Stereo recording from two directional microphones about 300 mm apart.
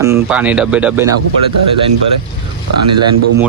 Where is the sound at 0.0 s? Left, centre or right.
Centre.